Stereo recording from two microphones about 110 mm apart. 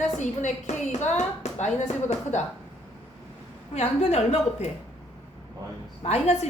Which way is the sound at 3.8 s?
75° left (ahead or behind).